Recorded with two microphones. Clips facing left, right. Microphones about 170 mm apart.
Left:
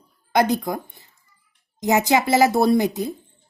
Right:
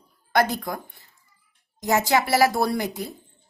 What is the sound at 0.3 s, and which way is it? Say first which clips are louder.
A woman's voice: left 3 dB; 15° left (ahead or behind).